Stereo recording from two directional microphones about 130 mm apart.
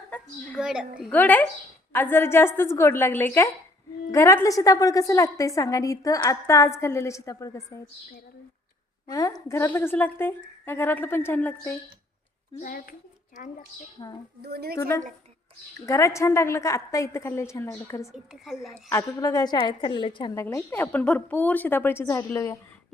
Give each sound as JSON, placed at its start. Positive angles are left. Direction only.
{"t": 0.1, "sound": "a woman's voice", "side_deg": 10}
{"t": 0.6, "sound": "a woman's voice", "side_deg": -5}
{"t": 1.1, "sound": "a woman's voice", "side_deg": 15}
{"t": 9.0, "sound": "a woman's voice", "side_deg": 25}
{"t": 12.6, "sound": "a child's voice", "side_deg": 90}
{"t": 14.0, "sound": "a woman's voice", "side_deg": 30}
{"t": 14.8, "sound": "a woman's voice", "side_deg": 20}
{"t": 20.3, "sound": "a woman's voice", "side_deg": 20}